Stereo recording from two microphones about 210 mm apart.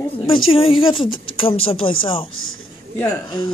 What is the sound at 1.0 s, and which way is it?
Speech, 75° left (ahead or behind).